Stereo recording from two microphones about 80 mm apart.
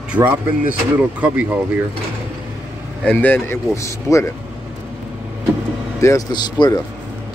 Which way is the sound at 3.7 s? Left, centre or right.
Left.